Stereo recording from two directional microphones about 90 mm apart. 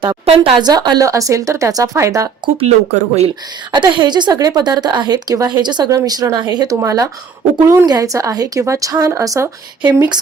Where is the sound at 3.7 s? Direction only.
60° right (ahead or behind).